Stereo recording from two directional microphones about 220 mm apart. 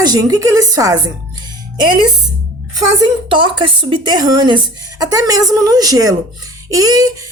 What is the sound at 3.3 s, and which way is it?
A woman's voice, 20° right (ahead or behind).